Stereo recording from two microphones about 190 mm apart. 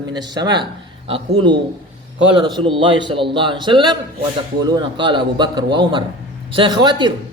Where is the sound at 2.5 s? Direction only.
25° right (ahead or behind).